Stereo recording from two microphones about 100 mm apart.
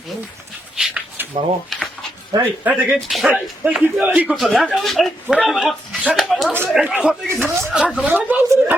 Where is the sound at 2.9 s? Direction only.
Centre (ahead or behind).